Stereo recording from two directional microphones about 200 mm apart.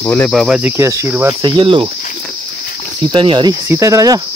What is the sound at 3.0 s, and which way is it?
Cricket, 25° right (ahead or behind).